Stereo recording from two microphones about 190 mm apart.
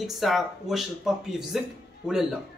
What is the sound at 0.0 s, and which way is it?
Speech, centre (ahead or behind).